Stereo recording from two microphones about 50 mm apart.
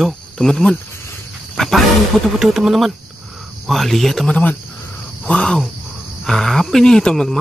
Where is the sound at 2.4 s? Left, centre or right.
Centre.